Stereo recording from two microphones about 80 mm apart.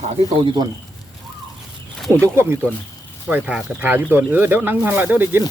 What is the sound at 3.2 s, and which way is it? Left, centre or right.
Speech, centre.